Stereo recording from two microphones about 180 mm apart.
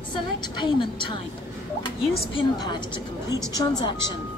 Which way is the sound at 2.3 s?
25° left (ahead or behind).